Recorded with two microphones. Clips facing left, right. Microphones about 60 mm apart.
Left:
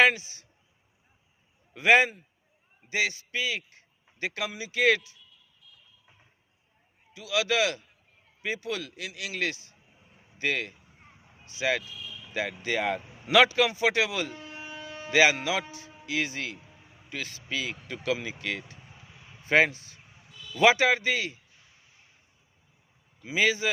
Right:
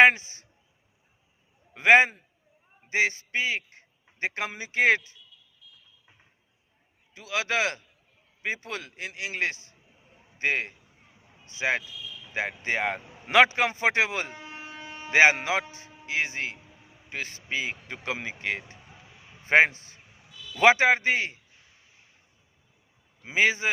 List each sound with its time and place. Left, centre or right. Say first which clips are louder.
0.0 s a man's voice: right 4 dB; right
1.7 s a man's voice: right 2 dB; right
7.1 s a man's voice: left 1 dB; right
14.3 s a sound: even; centre; by 15.6 s right
15.6 s a man's voice: even; right
23.2 s a man's voice: right 2 dB; right